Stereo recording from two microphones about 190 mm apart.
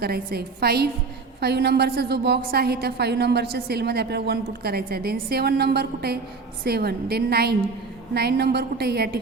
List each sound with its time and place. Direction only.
0.0 s a woman's voice: 55° right (ahead or behind)